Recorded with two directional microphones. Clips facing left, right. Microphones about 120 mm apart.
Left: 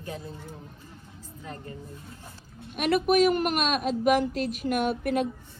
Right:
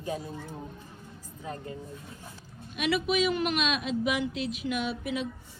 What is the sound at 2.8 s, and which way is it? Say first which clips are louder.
Speech: left 5 dB; 50° left (ahead or behind).